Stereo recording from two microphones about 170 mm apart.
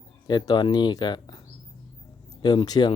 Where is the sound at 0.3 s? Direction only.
25° left (ahead or behind).